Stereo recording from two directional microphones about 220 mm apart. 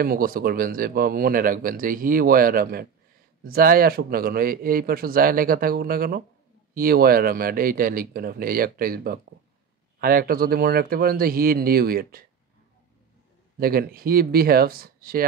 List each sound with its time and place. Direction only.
0.0 s speech: 40° right (ahead or behind)
13.6 s speech: 45° right (ahead or behind)